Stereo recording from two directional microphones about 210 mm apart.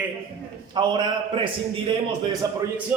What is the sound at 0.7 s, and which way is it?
A man's voice, 20° right (ahead or behind).